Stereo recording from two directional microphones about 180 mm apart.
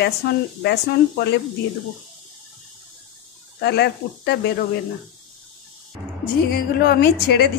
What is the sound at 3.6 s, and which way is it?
Speech, 65° left (ahead or behind).